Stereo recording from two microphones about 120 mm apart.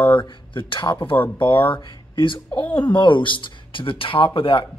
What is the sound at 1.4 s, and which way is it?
Speech, 45° left (ahead or behind).